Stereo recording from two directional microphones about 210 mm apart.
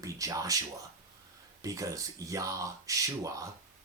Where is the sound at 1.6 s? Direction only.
15° right (ahead or behind).